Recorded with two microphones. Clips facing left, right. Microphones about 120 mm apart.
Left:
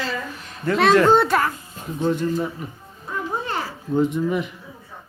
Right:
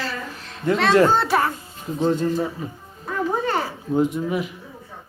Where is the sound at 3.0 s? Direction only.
65° right (ahead or behind).